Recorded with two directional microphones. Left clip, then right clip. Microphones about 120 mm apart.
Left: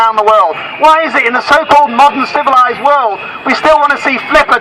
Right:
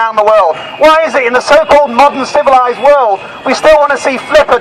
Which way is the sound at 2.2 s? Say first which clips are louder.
Right 1 dB; 55° right (ahead or behind).